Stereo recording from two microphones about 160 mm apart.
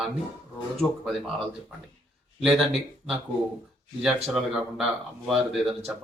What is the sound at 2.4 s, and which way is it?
Speech, centre (ahead or behind).